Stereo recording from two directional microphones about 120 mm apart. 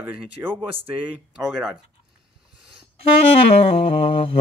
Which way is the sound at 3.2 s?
55° left (ahead or behind).